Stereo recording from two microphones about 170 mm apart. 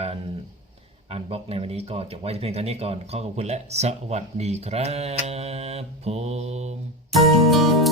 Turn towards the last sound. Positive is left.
turn(degrees=0)  # may be behind; listen again after turning